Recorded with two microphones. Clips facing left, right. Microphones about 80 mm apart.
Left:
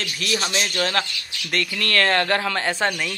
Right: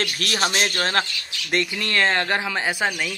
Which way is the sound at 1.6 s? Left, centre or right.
Centre.